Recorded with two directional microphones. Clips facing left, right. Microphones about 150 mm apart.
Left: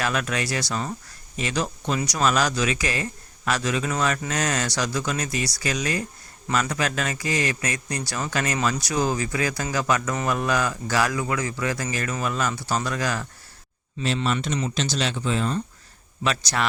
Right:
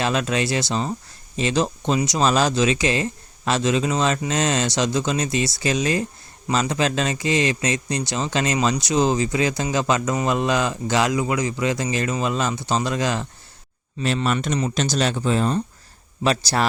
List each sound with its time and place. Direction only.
0.0 s speech: 25° right (ahead or behind)
14.3 s speech: 45° right (ahead or behind)